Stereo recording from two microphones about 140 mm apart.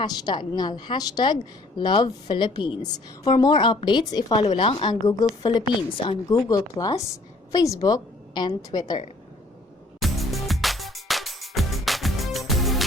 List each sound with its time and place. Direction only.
0.0 s a woman's voice: 30° left (ahead or behind)
10.0 s music: centre (ahead or behind)